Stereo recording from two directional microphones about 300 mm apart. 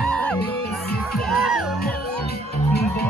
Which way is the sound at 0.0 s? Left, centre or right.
Centre.